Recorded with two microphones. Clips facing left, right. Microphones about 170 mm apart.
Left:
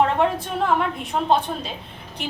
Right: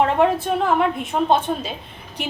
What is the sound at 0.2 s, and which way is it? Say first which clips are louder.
A woman's voice: right 3 dB; 5° right (ahead or behind).